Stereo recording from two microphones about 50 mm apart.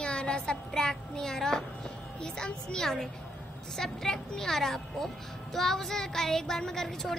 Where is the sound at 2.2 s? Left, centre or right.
Centre.